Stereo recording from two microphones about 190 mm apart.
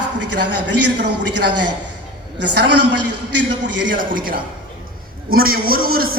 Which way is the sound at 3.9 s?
45° right (ahead or behind).